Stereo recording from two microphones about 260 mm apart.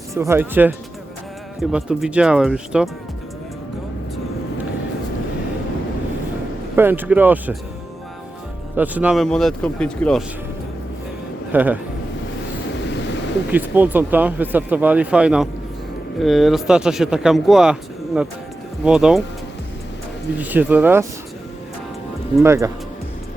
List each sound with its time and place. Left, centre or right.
0.1 s speech: centre
1.7 s speech: centre
6.7 s speech: centre
8.7 s speech: centre
11.5 s speech: centre
12.8 s a sound: left
13.5 s speech: centre
20.4 s speech: centre
22.4 s speech: centre